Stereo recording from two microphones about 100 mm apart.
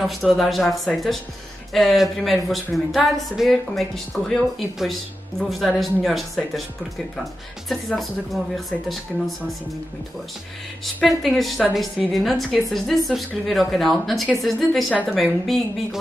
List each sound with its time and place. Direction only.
0.0 s a woman's voice: centre (ahead or behind)
7.6 s a woman's voice: centre (ahead or behind)
11.1 s a woman's voice: centre (ahead or behind)